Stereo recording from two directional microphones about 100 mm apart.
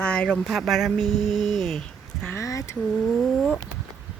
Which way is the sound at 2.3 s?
30° left (ahead or behind).